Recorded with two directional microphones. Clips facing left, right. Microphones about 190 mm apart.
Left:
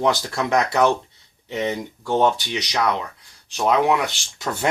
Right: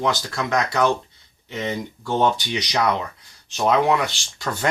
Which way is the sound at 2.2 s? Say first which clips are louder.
Left 1 dB; centre (ahead or behind).